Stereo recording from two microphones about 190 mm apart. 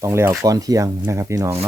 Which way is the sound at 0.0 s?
15° right (ahead or behind).